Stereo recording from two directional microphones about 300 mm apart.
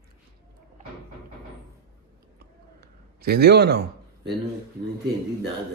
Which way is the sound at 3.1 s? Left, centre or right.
Right.